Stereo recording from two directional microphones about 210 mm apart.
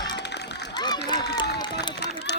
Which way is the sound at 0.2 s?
55° left (ahead or behind).